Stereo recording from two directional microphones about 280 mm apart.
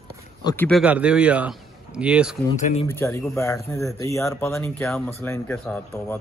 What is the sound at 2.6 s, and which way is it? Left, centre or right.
Speech, left.